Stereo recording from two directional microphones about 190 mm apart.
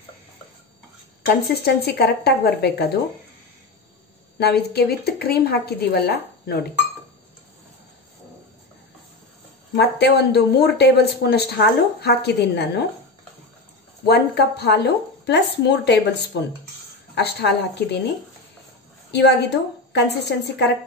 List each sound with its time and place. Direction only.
1.6 s speech: 60° left (ahead or behind)
4.4 s speech: 60° left (ahead or behind)
9.8 s speech: 60° left (ahead or behind)
14.0 s speech: 60° left (ahead or behind)
17.1 s speech: 60° left (ahead or behind)
19.1 s speech: 65° left (ahead or behind)